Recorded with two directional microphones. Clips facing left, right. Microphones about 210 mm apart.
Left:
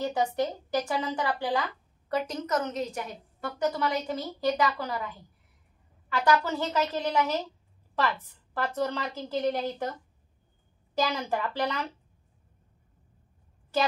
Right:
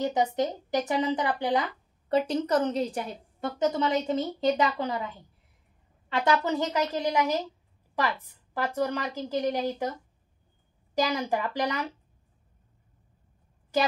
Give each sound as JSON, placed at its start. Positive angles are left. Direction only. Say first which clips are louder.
{"t": 0.0, "sound": "a woman's voice", "louder": "right 2 dB", "side_deg": -20}
{"t": 11.0, "sound": "a woman's voice", "louder": "right 2 dB", "side_deg": -15}